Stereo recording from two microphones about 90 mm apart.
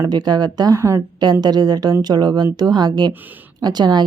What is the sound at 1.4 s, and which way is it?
Speech, 50° right (ahead or behind).